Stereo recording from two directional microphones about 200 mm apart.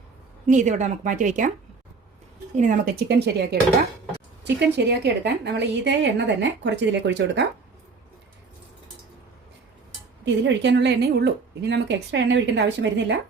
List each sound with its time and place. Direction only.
0.4 s a woman's voice: 40° right (ahead or behind)
2.6 s a woman's voice: 40° right (ahead or behind)
3.1 s a woman's voice: 55° right (ahead or behind)
10.2 s a woman's voice: 60° right (ahead or behind)